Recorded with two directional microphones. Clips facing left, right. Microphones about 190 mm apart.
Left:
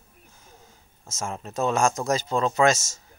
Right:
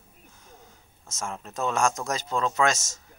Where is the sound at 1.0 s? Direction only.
Centre (ahead or behind).